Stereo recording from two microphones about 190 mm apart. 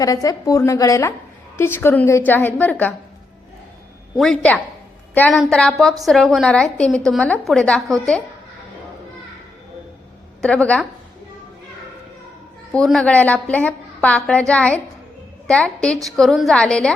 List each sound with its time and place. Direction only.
0.0 s a woman's voice: 20° left (ahead or behind)
4.2 s a woman's voice: 5° left (ahead or behind)
10.4 s a woman's voice: 5° left (ahead or behind)
12.7 s a woman's voice: centre (ahead or behind)